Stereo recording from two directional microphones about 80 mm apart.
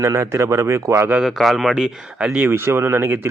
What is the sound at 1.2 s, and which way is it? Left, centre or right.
Speech, centre.